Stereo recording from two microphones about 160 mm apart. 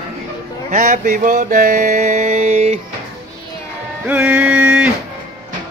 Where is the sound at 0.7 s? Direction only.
55° right (ahead or behind).